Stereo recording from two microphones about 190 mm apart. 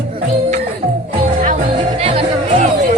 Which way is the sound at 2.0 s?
30° right (ahead or behind).